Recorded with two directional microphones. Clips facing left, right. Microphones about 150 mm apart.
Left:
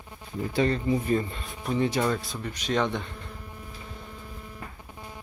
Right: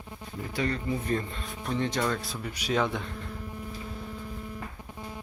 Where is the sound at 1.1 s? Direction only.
5° left (ahead or behind).